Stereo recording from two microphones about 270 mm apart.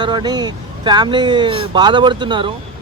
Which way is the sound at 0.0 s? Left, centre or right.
Centre.